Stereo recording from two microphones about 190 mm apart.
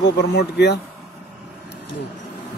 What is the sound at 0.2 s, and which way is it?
Speech, 60° left (ahead or behind).